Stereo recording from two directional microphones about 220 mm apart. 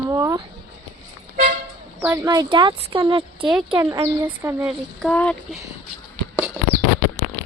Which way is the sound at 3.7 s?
10° right (ahead or behind).